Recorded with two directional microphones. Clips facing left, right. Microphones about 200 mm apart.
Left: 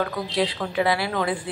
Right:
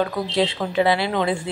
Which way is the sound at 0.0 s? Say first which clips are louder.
Right 3 dB; 25° right (ahead or behind).